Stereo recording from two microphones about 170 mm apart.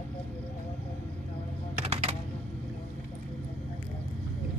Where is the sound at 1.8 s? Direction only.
40° right (ahead or behind).